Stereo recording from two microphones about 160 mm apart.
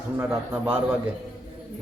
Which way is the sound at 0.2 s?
10° right (ahead or behind).